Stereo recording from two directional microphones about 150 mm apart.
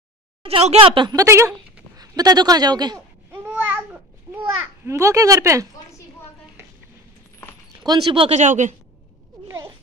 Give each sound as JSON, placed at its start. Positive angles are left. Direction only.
{"t": 0.4, "sound": "speech", "side_deg": -40}
{"t": 1.2, "sound": "a man's voice", "side_deg": -20}
{"t": 3.3, "sound": "babbling", "side_deg": -10}
{"t": 4.8, "sound": "speech", "side_deg": -20}
{"t": 7.8, "sound": "speech", "side_deg": -30}
{"t": 8.4, "sound": "a woman's voice", "side_deg": -55}